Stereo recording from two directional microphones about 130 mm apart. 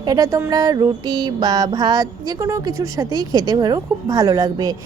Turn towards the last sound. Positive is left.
turn(degrees=-30)  # may be behind; listen again after turning